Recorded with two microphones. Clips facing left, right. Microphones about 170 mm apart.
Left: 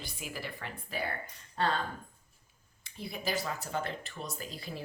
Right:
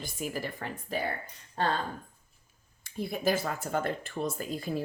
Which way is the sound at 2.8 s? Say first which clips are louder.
Right 8 dB; 50° right (ahead or behind).